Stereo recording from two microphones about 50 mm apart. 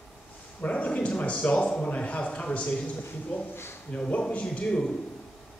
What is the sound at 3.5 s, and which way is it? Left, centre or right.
Speech, left.